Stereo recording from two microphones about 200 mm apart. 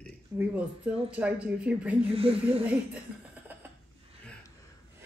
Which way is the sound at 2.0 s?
30° right (ahead or behind).